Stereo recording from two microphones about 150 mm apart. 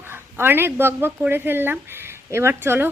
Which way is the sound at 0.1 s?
15° right (ahead or behind).